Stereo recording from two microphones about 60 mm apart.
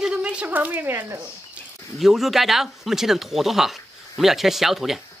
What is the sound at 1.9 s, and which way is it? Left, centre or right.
Speech, centre.